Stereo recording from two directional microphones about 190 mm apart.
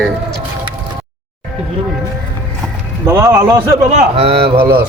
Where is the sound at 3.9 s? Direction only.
30° right (ahead or behind).